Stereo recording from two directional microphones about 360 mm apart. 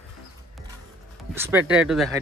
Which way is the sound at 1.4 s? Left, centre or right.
Centre.